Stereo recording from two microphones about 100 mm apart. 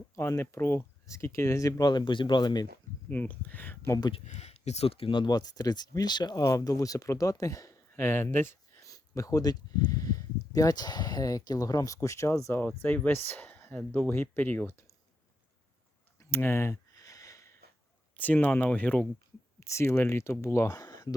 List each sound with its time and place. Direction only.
0.2 s speech: 25° left (ahead or behind); by 2.6 s 45° left (ahead or behind)
3.1 s speech: 15° left (ahead or behind)
4.1 s speech: 90° left; by 5.2 s 70° left (ahead or behind)
5.2 s speech: 40° left (ahead or behind)
7.9 s speech: 25° left (ahead or behind)
8.9 s speech: 35° left (ahead or behind); by 14.1 s 10° left (ahead or behind)
14.1 s speech: 20° left (ahead or behind)
16.3 s a sound: 25° left (ahead or behind)
18.2 s speech: 15° left (ahead or behind)
19.5 s speech: 30° left (ahead or behind)